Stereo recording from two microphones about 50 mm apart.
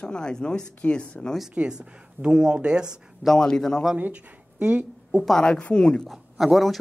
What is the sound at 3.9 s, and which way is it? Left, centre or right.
Speech, right.